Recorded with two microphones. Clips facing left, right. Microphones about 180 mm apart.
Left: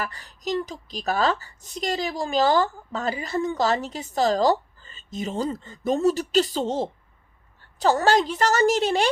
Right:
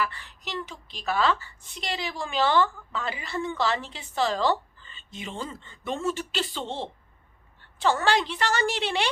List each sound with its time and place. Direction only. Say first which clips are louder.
0.0 s a woman's voice: left 1 dB; 40° left (ahead or behind)